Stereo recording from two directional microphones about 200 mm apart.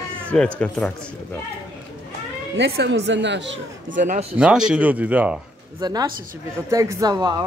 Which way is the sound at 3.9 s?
40° right (ahead or behind).